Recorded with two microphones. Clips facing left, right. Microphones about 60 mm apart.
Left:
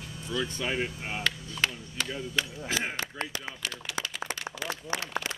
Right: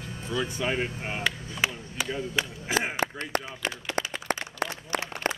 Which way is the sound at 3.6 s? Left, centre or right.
Right.